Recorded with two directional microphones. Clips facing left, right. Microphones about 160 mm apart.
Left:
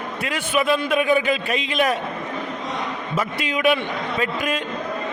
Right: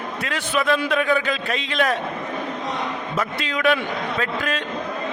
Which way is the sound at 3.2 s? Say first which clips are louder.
Left 1 dB; 10° left (ahead or behind).